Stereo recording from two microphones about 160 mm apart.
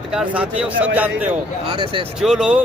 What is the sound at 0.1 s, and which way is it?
Speech, 5° right (ahead or behind).